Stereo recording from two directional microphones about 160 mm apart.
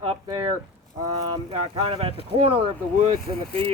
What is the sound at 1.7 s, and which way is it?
Speech, 35° right (ahead or behind).